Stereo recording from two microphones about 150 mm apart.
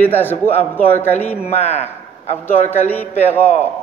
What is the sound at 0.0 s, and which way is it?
A man's voice, 15° left (ahead or behind).